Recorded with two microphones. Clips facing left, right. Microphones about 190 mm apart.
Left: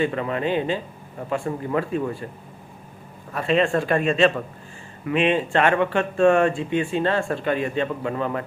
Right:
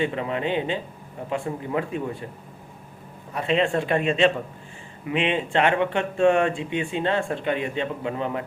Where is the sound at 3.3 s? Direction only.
20° right (ahead or behind).